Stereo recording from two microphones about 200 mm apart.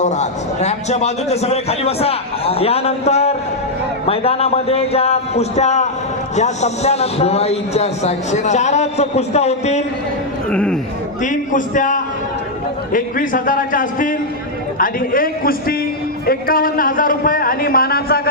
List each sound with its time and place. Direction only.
0.0 s a man's voice: 35° left (ahead or behind)
10.5 s speech: 5° left (ahead or behind)
11.2 s a man's voice: 40° left (ahead or behind)